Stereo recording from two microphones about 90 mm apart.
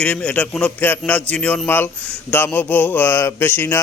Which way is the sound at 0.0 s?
10° left (ahead or behind).